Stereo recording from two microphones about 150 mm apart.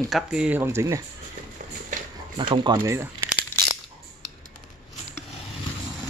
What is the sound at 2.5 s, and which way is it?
Speech, 30° right (ahead or behind).